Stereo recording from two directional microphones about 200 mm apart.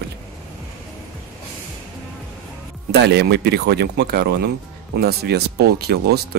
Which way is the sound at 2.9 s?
55° right (ahead or behind).